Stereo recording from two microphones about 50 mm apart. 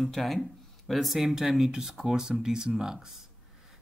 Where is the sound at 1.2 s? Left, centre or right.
Centre.